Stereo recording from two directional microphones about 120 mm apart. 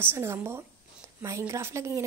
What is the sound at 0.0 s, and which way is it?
A woman's voice, 20° right (ahead or behind).